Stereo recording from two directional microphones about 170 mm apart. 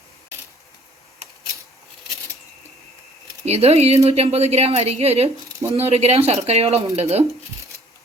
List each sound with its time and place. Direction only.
3.4 s a woman's voice: 40° right (ahead or behind)